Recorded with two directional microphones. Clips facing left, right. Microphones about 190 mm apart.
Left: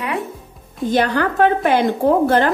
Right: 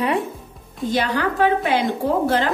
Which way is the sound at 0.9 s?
50° left (ahead or behind).